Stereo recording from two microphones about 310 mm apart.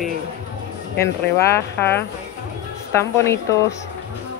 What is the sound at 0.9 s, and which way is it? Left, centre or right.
Speech, centre.